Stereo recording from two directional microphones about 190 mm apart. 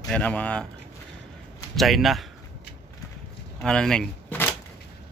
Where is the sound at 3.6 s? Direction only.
5° left (ahead or behind).